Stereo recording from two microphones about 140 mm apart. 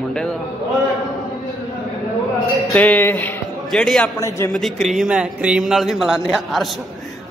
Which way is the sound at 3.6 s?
5° left (ahead or behind).